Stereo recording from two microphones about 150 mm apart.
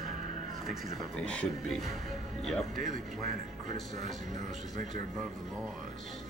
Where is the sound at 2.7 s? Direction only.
60° right (ahead or behind).